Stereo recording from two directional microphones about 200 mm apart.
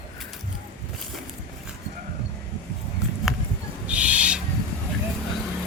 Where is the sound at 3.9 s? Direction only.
5° right (ahead or behind).